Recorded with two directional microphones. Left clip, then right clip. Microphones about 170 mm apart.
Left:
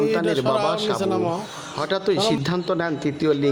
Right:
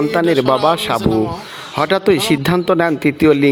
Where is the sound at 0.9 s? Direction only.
65° left (ahead or behind).